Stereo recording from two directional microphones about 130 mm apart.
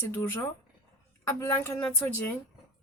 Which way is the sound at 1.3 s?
25° left (ahead or behind).